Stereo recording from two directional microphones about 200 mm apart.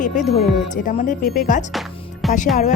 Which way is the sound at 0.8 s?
40° left (ahead or behind).